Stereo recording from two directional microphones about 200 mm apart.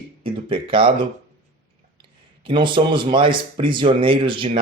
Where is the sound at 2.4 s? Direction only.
25° right (ahead or behind).